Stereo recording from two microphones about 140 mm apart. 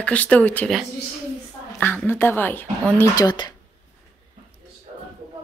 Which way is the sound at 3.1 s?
30° left (ahead or behind).